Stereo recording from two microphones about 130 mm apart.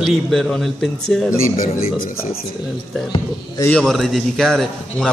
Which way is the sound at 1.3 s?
90° left.